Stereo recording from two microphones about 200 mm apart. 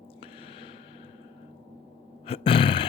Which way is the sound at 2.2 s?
30° left (ahead or behind).